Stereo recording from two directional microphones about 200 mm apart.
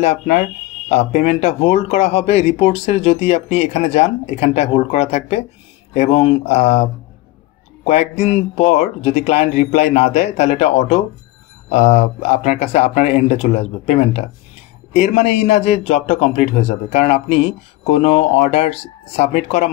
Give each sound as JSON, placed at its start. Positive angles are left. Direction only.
{"t": 0.0, "sound": "a man's voice", "side_deg": 30}